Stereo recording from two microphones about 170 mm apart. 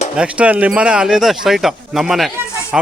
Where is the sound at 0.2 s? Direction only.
5° right (ahead or behind).